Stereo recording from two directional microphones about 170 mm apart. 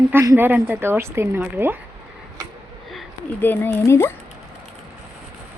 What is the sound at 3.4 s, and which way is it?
Speech, 10° left (ahead or behind).